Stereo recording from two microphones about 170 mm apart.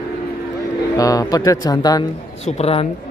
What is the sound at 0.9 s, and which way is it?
Speech, 20° left (ahead or behind).